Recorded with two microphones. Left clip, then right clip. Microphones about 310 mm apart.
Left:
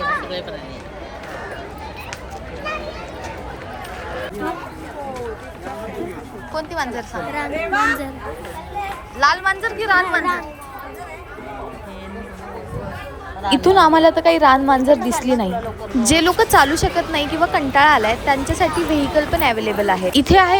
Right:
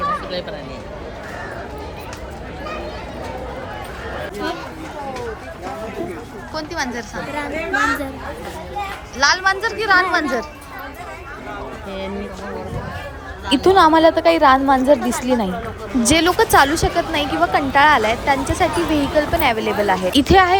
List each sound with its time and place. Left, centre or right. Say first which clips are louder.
6.5 s speech: left 1 dB; centre
7.7 s a woman's voice: left 1 dB; centre
9.1 s speech: even; centre
13.5 s speech: even; centre